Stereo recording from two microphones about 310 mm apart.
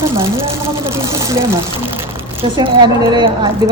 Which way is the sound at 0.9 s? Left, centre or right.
Centre.